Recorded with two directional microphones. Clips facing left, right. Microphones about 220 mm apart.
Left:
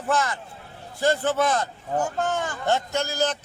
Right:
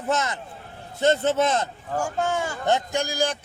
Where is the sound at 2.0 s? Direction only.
10° right (ahead or behind).